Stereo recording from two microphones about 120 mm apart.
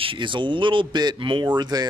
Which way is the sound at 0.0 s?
45° right (ahead or behind).